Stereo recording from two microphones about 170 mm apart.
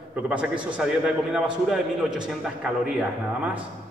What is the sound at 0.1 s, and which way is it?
A man's voice, 5° right (ahead or behind).